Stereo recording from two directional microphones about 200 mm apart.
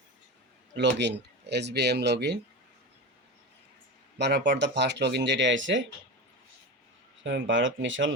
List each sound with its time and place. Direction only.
0.8 s speech: 60° right (ahead or behind)
4.2 s speech: 55° right (ahead or behind)
7.3 s speech: 65° right (ahead or behind)